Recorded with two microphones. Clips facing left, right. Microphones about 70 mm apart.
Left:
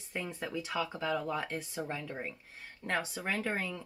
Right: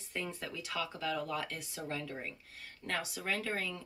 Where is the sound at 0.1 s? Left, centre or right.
Left.